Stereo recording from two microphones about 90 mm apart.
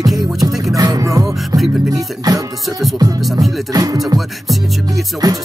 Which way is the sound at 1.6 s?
Centre (ahead or behind).